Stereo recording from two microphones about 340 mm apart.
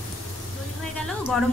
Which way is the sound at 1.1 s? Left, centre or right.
Centre.